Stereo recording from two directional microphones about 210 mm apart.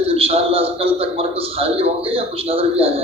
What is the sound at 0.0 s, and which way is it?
A man's voice, 25° right (ahead or behind).